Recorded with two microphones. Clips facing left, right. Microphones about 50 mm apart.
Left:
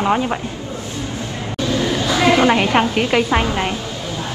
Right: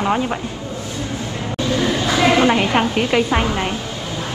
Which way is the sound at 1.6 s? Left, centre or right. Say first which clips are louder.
Even; right.